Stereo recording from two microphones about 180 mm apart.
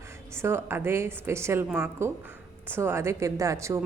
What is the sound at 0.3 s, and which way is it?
A woman's voice, 15° right (ahead or behind).